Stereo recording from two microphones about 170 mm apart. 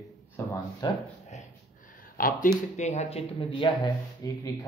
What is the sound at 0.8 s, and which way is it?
Speech, 25° left (ahead or behind).